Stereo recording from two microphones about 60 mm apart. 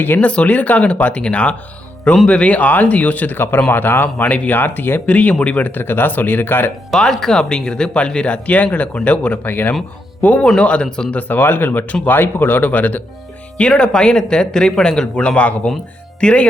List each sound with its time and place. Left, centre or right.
0.0 s speech: left
0.3 s speech: left
6.9 s speech: centre; by 9.7 s left
10.6 s speech: centre
11.2 s speech: left
13.6 s speech: centre